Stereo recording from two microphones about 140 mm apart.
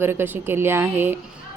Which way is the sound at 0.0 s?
15° right (ahead or behind).